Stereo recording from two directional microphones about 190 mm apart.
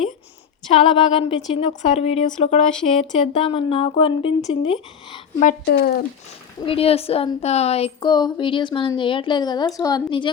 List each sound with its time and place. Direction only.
0.7 s speech: 30° left (ahead or behind)
5.6 s speech: 55° left (ahead or behind)
6.6 s a woman's voice: 30° left (ahead or behind)